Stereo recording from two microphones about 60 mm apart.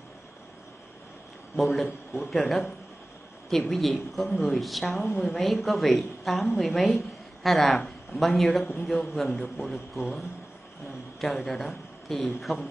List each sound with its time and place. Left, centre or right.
1.6 s a woman's voice: centre